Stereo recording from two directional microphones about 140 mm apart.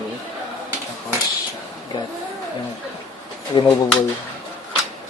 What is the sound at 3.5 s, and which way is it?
Speech, 35° left (ahead or behind).